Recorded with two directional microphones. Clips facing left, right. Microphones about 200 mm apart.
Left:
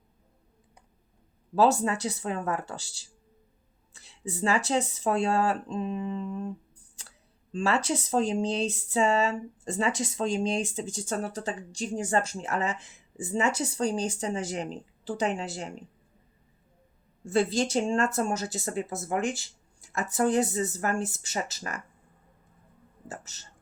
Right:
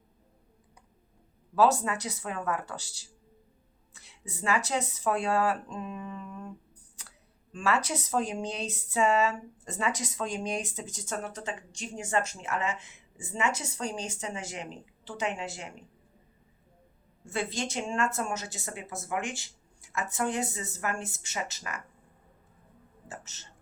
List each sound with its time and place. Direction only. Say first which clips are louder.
1.5 s speech: left 2 dB; 30° left (ahead or behind)
17.2 s speech: left 8 dB; 35° left (ahead or behind)
23.0 s speech: left 3 dB; 35° left (ahead or behind)